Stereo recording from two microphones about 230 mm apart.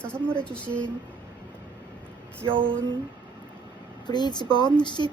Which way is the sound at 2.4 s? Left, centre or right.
Right.